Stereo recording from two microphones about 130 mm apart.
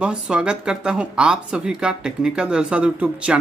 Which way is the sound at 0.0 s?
5° right (ahead or behind).